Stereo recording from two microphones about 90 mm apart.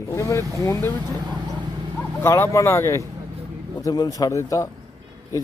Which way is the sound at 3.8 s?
45° left (ahead or behind).